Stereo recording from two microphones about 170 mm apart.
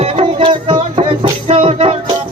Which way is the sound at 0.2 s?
35° right (ahead or behind).